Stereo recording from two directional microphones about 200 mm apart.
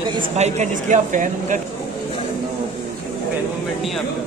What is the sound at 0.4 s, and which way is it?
Speech, 35° right (ahead or behind).